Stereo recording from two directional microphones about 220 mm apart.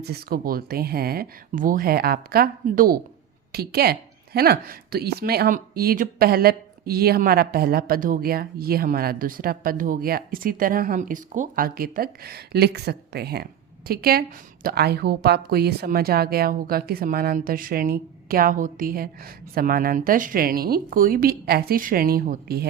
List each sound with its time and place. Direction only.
0.0 s speech: 45° right (ahead or behind)